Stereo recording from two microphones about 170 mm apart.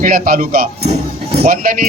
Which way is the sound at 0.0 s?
55° right (ahead or behind).